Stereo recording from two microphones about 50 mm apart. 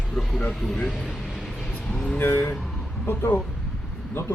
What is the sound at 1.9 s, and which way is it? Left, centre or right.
Speech, centre.